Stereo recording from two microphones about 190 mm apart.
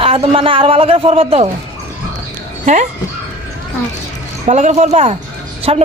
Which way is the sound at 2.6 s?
40° right (ahead or behind).